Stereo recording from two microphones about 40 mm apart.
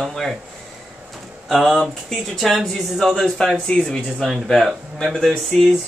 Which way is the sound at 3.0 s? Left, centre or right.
Centre.